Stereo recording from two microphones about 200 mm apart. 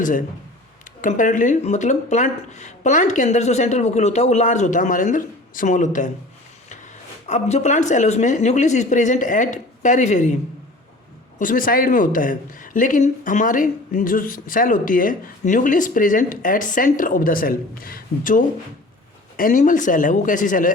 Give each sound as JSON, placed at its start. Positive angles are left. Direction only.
{"t": 0.0, "sound": "speech", "side_deg": 40}
{"t": 7.3, "sound": "speech", "side_deg": 35}
{"t": 11.3, "sound": "speech", "side_deg": 40}